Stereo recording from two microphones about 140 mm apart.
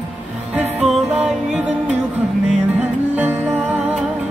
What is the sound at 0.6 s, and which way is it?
Music, 5° right (ahead or behind).